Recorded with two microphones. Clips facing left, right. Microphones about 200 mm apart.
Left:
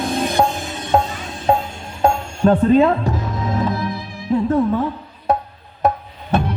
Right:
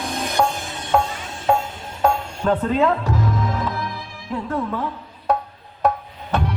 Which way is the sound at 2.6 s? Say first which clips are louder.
Left 6 dB; 25° left (ahead or behind).